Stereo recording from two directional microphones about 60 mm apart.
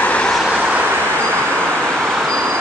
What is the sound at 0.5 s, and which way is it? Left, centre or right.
Vehicle, right.